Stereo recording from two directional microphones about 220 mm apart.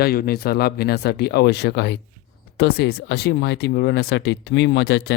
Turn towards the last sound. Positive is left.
turn(degrees=50)  # may be behind; listen again after turning